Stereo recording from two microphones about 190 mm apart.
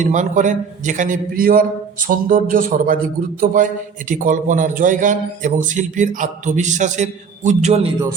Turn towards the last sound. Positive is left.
turn(degrees=-35)  # may be behind; listen again after turning